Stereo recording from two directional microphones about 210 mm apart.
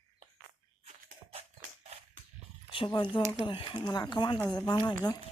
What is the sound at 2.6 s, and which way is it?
Speech, 25° left (ahead or behind).